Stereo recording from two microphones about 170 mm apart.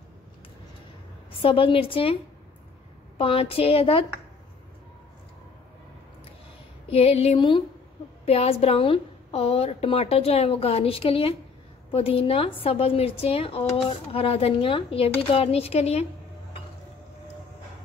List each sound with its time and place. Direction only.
1.3 s a woman's voice: 30° left (ahead or behind)
3.2 s a woman's voice: 30° left (ahead or behind)
6.9 s a woman's voice: 35° left (ahead or behind)